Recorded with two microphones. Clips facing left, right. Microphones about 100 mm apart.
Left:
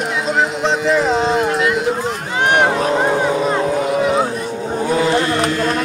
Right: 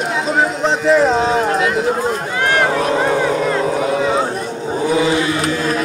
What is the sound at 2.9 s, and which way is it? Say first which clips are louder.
Vehicle: even; 5° left (ahead or behind).